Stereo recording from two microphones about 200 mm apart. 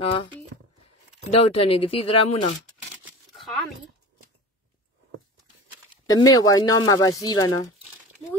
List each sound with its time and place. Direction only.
0.0 s speech: 25° left (ahead or behind)
1.3 s speech: 30° left (ahead or behind)
3.3 s a sound: centre (ahead or behind)
6.0 s speech: 20° left (ahead or behind)